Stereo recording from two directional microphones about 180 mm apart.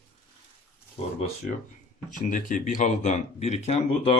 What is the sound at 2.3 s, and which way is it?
Speech, 45° left (ahead or behind).